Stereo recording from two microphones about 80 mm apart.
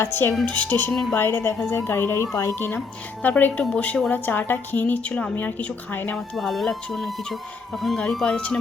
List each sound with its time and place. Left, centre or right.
0.0 s a woman's voice: left
0.5 s a woman's voice: centre; by 2.6 s left
3.2 s a woman's voice: left
6.3 s speech: centre
7.9 s speech: centre